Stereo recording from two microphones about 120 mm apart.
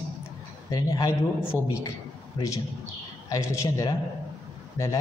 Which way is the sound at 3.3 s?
30° left (ahead or behind).